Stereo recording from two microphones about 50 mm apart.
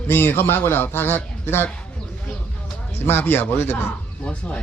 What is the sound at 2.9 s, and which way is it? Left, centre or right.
Speech, left.